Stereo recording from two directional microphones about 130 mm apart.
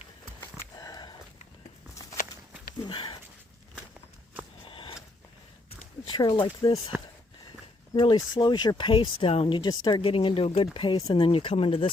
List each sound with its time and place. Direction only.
0.5 s sniff: 30° left (ahead or behind)
2.8 s sniff: 40° left (ahead or behind)
4.6 s a sound: 40° left (ahead or behind)
6.1 s speech: 35° left (ahead or behind)
7.9 s speech: 35° left (ahead or behind)
10.8 s speech: 35° left (ahead or behind)
11.1 s speech: 45° left (ahead or behind)